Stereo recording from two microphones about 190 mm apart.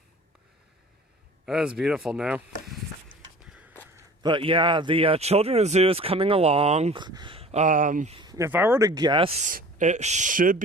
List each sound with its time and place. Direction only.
1.5 s speech: 5° right (ahead or behind)
3.5 s a sound: 5° right (ahead or behind)
4.2 s speech: 25° right (ahead or behind)
7.0 s speech: 25° right (ahead or behind); by 8.1 s 45° right (ahead or behind)
8.1 s speech: 20° right (ahead or behind)
9.4 s speech: 45° right (ahead or behind)